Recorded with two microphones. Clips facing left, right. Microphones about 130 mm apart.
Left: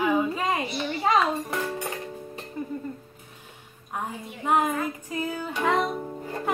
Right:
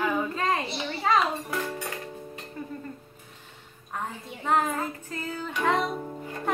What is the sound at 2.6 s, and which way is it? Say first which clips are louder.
Music: left 5 dB; 15° left (ahead or behind).